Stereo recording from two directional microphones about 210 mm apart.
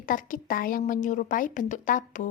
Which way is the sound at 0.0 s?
40° left (ahead or behind).